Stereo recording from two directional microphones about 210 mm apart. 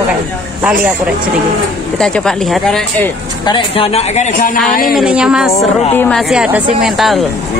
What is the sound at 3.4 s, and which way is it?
Speech, 25° left (ahead or behind).